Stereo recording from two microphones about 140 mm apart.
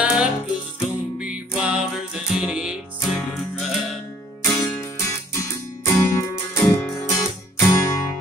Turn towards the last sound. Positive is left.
turn(degrees=20)  # may be behind; listen again after turning